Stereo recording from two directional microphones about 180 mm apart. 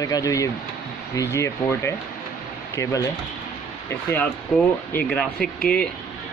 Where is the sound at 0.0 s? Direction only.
20° left (ahead or behind).